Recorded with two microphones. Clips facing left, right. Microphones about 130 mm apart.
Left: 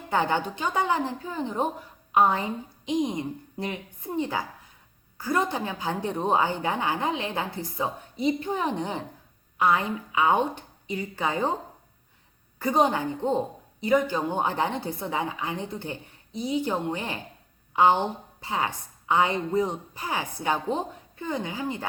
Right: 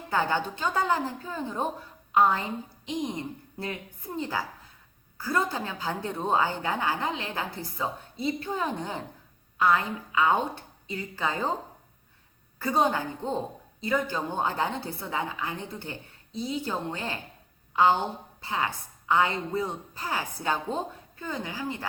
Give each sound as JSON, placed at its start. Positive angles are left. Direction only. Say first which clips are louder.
{"t": 0.1, "sound": "a woman's voice", "louder": "left 2 dB", "side_deg": 20}
{"t": 12.5, "sound": "a woman's voice", "louder": "left 2 dB", "side_deg": 15}